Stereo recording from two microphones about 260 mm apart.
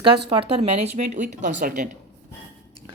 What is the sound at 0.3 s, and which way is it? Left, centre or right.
Speech, right.